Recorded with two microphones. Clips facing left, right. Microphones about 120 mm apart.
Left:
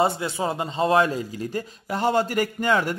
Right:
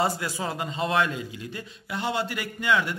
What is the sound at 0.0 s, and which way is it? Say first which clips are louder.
A man's voice: left 4 dB; 25° left (ahead or behind).